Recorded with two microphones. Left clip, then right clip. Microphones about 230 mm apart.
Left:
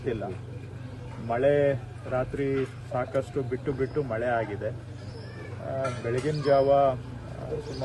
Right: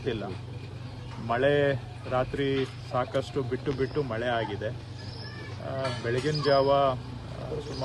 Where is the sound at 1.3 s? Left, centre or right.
Centre.